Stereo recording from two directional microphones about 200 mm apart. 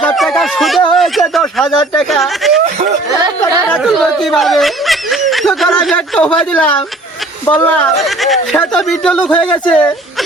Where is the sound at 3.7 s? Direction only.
Centre (ahead or behind).